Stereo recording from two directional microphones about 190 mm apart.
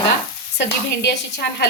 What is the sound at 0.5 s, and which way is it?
Speech, 60° left (ahead or behind).